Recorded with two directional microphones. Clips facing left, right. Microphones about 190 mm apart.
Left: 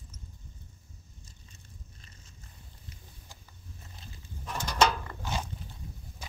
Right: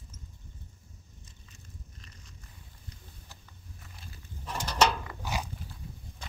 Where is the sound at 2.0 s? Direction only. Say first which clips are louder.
Right 2 dB; 30° left (ahead or behind).